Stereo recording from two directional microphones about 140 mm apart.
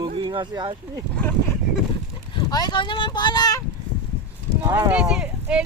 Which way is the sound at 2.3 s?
30° left (ahead or behind).